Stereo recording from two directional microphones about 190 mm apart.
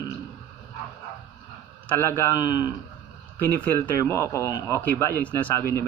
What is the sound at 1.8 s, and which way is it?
Speech, 10° left (ahead or behind).